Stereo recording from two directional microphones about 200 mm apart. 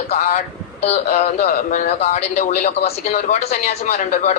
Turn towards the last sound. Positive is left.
turn(degrees=40)  # may be behind; listen again after turning